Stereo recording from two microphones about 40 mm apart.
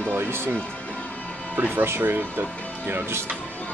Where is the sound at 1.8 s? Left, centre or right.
Right.